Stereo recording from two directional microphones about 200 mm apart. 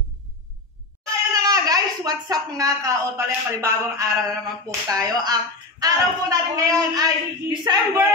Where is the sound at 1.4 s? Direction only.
20° right (ahead or behind).